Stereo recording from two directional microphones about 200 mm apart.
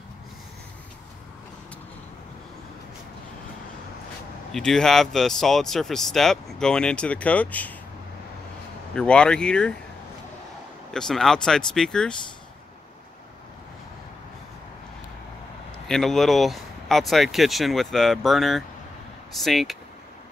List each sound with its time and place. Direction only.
4.5 s speech: 5° left (ahead or behind)
8.9 s speech: 5° left (ahead or behind)
10.9 s speech: centre (ahead or behind)
15.9 s speech: centre (ahead or behind)